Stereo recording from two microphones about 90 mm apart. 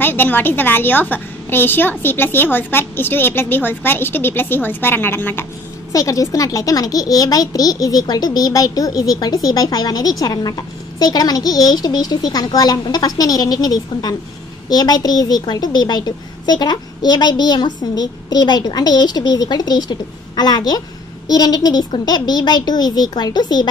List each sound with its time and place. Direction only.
0.0 s a woman's voice: 25° left (ahead or behind)
5.9 s a woman's voice: 40° left (ahead or behind)